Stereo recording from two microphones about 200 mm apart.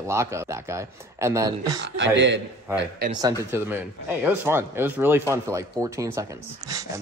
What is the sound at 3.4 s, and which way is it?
Speech, 10° right (ahead or behind).